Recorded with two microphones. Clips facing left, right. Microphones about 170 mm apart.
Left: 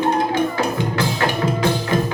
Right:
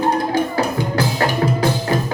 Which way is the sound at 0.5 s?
35° right (ahead or behind).